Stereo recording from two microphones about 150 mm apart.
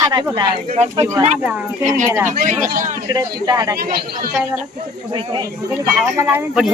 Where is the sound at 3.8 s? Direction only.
90° right.